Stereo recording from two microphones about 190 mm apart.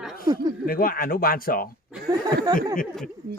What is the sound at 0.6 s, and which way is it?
Speech, 50° left (ahead or behind).